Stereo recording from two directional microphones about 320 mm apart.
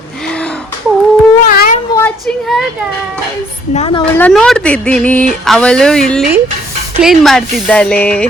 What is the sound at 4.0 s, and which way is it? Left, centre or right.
Speech, centre.